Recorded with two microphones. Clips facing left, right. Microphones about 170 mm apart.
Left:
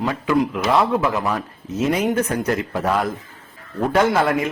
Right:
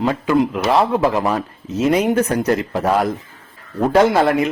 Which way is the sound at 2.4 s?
35° right (ahead or behind).